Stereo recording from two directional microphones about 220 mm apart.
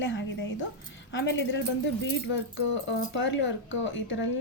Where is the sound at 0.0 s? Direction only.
55° left (ahead or behind).